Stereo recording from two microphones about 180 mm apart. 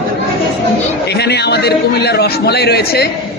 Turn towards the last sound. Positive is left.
turn(degrees=65)  # may be behind; listen again after turning